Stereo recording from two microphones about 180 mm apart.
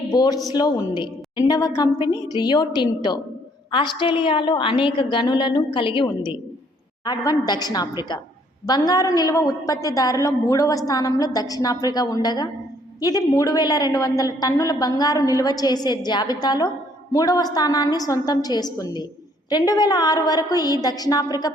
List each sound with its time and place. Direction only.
0.1 s a woman's voice: 20° left (ahead or behind)